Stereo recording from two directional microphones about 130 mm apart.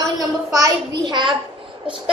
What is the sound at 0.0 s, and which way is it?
A woman's voice, 25° right (ahead or behind).